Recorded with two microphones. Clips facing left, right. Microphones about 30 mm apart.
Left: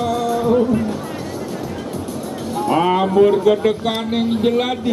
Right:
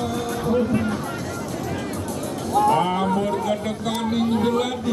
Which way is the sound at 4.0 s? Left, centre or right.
Left.